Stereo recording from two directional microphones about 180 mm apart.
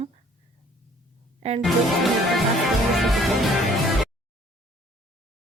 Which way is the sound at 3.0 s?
Centre (ahead or behind).